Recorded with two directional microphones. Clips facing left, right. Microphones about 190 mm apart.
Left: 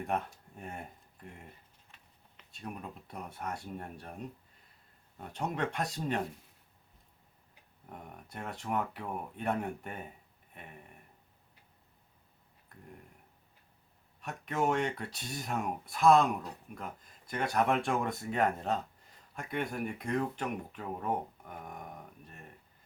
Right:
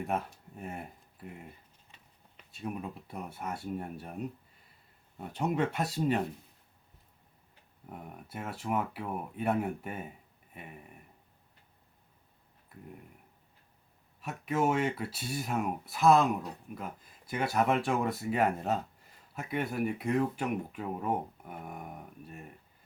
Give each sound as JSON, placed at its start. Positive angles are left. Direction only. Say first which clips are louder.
{"t": 0.0, "sound": "speech", "louder": "right 1 dB", "side_deg": 0}
{"t": 2.5, "sound": "speech", "louder": "right 5 dB", "side_deg": -5}
{"t": 7.9, "sound": "speech", "louder": "right 3 dB", "side_deg": -5}
{"t": 12.7, "sound": "speech", "louder": "right 5 dB", "side_deg": -5}
{"t": 14.2, "sound": "speech", "louder": "right 3 dB", "side_deg": -5}